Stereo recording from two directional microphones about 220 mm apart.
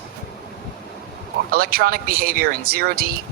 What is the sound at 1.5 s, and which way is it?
Speech, 45° right (ahead or behind).